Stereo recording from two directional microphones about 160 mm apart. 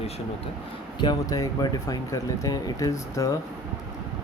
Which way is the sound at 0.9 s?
25° left (ahead or behind).